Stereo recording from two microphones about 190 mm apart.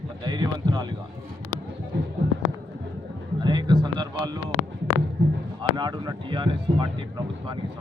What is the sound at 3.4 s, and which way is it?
Speech, 25° right (ahead or behind).